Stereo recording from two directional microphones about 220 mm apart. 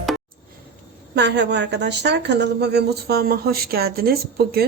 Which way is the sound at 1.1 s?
50° right (ahead or behind).